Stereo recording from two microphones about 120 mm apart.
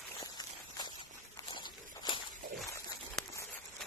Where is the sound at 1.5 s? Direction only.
40° left (ahead or behind).